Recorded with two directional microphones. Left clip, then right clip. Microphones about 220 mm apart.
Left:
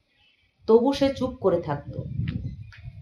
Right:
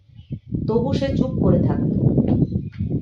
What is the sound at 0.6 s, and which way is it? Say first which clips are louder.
Speech: left 3 dB; 35° left (ahead or behind).